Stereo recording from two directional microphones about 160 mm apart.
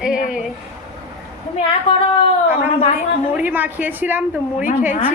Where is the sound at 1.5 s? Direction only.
35° left (ahead or behind).